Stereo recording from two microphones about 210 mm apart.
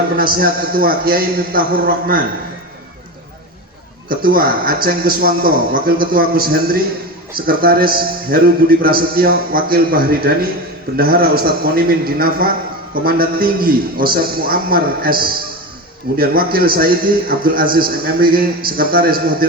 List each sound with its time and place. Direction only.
0.2 s a man's voice: 45° right (ahead or behind)
4.1 s a man's voice: 45° right (ahead or behind)